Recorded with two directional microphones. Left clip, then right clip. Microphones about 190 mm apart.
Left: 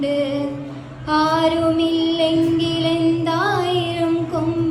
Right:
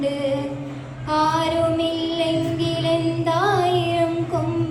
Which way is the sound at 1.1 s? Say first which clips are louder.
Left 2 dB; 10° left (ahead or behind).